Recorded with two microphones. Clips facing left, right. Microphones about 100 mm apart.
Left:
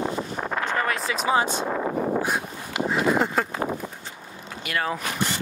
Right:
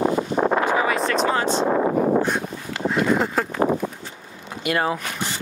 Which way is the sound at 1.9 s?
70° right (ahead or behind).